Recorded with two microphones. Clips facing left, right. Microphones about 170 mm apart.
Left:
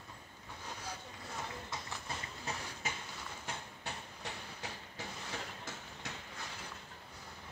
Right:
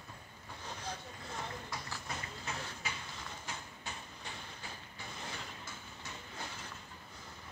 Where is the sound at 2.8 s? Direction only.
45° left (ahead or behind).